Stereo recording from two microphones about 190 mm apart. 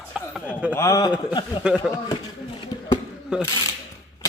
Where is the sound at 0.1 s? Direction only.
5° right (ahead or behind).